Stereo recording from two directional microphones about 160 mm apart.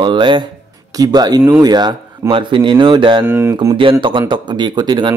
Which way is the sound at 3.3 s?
15° right (ahead or behind).